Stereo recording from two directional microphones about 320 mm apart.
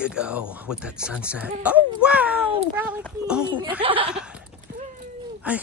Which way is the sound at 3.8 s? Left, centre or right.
Centre.